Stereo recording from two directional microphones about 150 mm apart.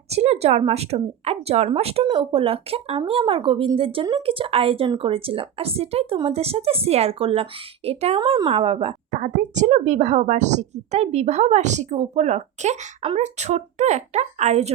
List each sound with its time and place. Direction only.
0.1 s speech: 45° right (ahead or behind)
8.2 s speech: 30° right (ahead or behind)
8.4 s speech: 40° right (ahead or behind)
9.1 s speech: 55° right (ahead or behind)